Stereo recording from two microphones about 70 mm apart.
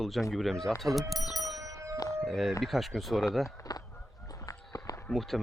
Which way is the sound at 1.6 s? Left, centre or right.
Right.